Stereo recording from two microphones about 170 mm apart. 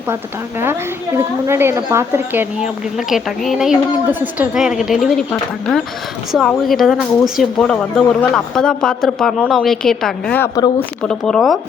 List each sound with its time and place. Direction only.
0.6 s a woman's voice: 15° right (ahead or behind)
3.1 s speech: centre (ahead or behind)